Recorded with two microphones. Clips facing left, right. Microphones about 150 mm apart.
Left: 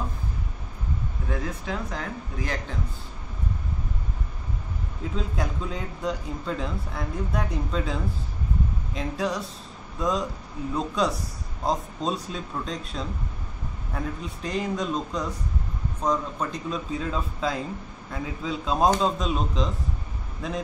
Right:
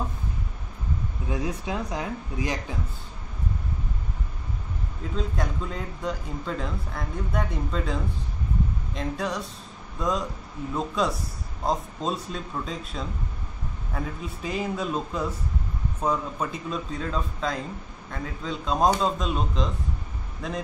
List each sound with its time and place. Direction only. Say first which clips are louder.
1.3 s speech: right 2 dB; 15° right (ahead or behind)
5.1 s speech: right 1 dB; centre (ahead or behind)